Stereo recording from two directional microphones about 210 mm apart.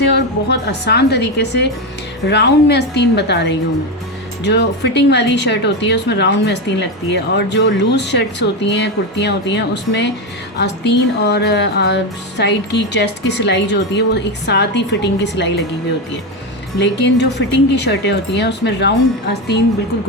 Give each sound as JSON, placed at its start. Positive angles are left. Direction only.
{"t": 0.1, "sound": "a woman's voice", "side_deg": 50}
{"t": 16.7, "sound": "speech", "side_deg": 55}